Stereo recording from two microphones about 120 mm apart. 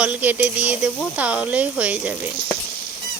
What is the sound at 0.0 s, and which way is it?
Speech, 15° right (ahead or behind).